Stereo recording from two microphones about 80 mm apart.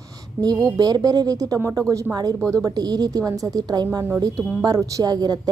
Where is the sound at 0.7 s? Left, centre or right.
Right.